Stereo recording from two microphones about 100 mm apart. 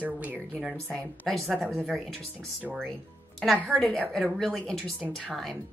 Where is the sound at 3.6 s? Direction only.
5° left (ahead or behind).